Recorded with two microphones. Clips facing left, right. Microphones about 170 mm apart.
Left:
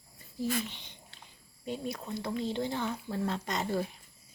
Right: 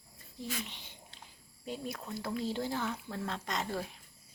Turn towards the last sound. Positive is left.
turn(degrees=0)  # may be behind; listen again after turning